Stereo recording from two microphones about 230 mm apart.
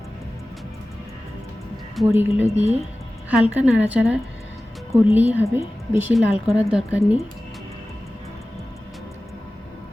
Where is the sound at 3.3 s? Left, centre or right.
Centre.